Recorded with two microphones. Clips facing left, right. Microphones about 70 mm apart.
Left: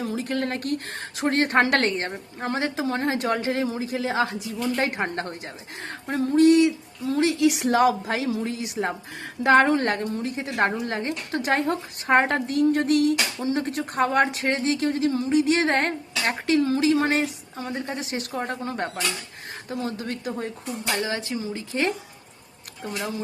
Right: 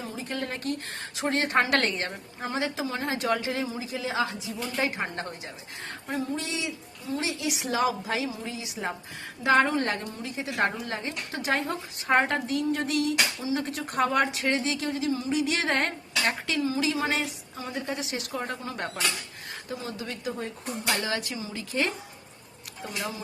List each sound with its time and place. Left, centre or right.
0.0 s a sound: left
0.3 s a woman's voice: left
2.4 s a woman's voice: left
5.8 s speech: left
6.4 s a woman's voice: left
9.6 s speech: left
9.9 s a woman's voice: left
16.6 s speech: left
16.8 s a woman's voice: left
21.0 s speech: left